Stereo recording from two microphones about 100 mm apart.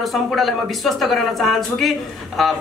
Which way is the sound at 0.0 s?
Centre (ahead or behind).